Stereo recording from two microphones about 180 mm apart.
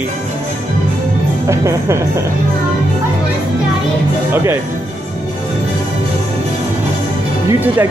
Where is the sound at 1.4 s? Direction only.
15° right (ahead or behind).